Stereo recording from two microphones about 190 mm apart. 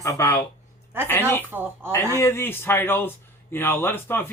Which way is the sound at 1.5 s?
10° right (ahead or behind).